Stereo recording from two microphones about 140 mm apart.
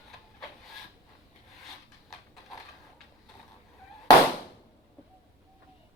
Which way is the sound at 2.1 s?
Centre (ahead or behind).